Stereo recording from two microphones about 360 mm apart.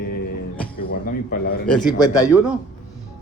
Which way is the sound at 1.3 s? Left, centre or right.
Left.